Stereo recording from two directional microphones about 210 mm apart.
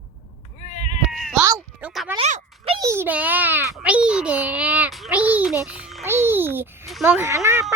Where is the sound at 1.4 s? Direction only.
15° right (ahead or behind).